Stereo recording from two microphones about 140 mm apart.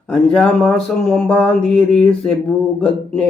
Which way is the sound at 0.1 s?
5° left (ahead or behind).